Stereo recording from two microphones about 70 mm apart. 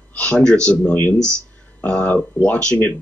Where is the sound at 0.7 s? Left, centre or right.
Left.